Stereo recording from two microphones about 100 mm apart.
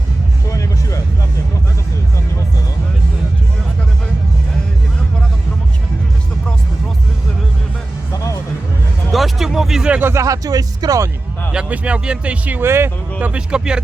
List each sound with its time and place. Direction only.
0.5 s music: 35° left (ahead or behind)
9.1 s music: centre (ahead or behind)
10.0 s speech: 25° right (ahead or behind)
11.5 s speech: 15° right (ahead or behind)